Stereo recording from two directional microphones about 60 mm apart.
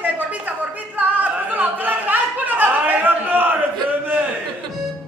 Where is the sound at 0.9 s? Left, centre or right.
Right.